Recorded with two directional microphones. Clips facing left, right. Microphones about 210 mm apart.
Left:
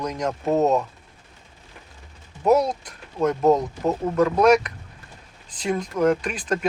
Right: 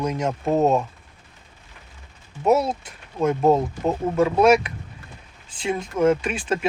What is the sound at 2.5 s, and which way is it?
Speech, 5° right (ahead or behind).